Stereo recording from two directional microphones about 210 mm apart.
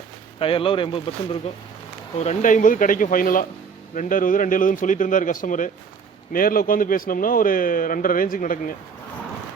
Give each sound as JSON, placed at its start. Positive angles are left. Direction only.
{"t": 0.3, "sound": "speech", "side_deg": 25}
{"t": 2.1, "sound": "a man's voice", "side_deg": 35}